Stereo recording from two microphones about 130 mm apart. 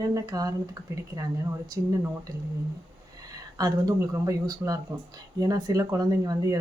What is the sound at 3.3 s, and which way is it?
Speech, 30° right (ahead or behind).